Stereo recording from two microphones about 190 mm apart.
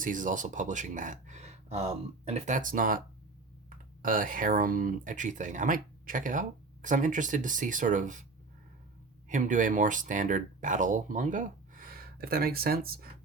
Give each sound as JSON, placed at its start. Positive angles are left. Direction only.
{"t": 0.0, "sound": "speech", "side_deg": -45}
{"t": 9.3, "sound": "speech", "side_deg": -45}